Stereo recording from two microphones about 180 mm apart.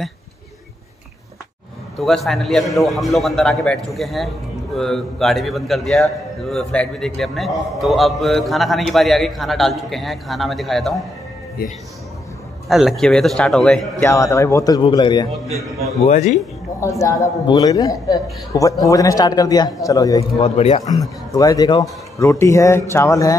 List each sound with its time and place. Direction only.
2.0 s a man's voice: centre (ahead or behind)
12.6 s a man's voice: centre (ahead or behind)
14.0 s a man's voice: 15° left (ahead or behind)
16.1 s a man's voice: 40° left (ahead or behind)
16.8 s a man's voice: 15° left (ahead or behind)
20.3 s a man's voice: 35° left (ahead or behind)
21.3 s a man's voice: 20° left (ahead or behind)